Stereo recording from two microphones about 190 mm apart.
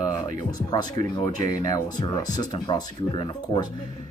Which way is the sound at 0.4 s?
20° left (ahead or behind).